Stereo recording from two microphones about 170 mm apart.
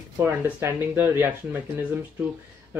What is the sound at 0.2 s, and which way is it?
Speech, 15° right (ahead or behind).